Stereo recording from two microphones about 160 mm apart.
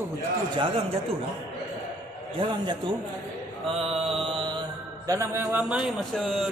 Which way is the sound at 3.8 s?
40° right (ahead or behind).